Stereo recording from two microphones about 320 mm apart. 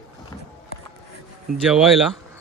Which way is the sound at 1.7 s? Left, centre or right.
Centre.